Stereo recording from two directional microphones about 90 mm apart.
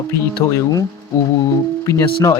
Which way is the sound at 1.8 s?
35° left (ahead or behind).